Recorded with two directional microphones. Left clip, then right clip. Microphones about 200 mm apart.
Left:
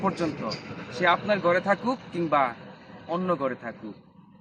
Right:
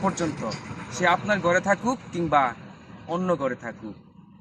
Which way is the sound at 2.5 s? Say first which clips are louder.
Left 1 dB; 35° left (ahead or behind).